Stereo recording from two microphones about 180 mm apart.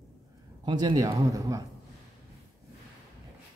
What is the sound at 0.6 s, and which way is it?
A man's voice, 25° right (ahead or behind).